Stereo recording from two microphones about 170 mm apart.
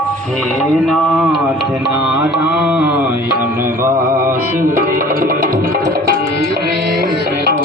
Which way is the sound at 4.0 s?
55° right (ahead or behind).